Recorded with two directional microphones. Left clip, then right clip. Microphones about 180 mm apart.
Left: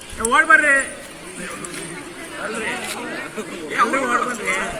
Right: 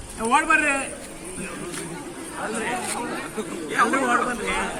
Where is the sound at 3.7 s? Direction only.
10° right (ahead or behind).